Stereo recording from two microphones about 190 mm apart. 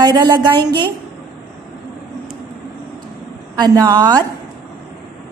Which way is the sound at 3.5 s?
20° right (ahead or behind).